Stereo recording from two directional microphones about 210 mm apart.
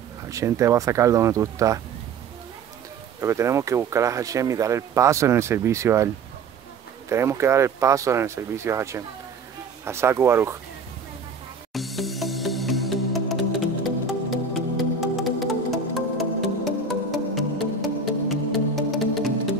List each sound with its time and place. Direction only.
0.3 s speech: 15° right (ahead or behind)
3.2 s speech: 15° right (ahead or behind)
7.1 s speech: 15° right (ahead or behind)
11.7 s music: centre (ahead or behind)